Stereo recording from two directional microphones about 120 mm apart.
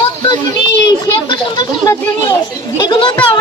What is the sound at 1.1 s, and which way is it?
Children playing, 35° left (ahead or behind).